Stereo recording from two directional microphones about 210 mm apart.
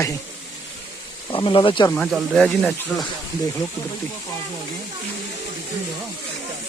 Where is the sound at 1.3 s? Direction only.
25° left (ahead or behind).